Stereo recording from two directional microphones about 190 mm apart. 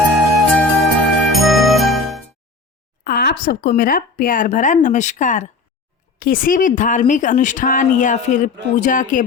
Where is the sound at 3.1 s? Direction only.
55° left (ahead or behind).